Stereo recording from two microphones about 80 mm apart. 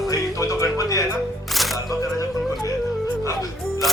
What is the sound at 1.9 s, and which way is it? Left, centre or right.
Speech, left.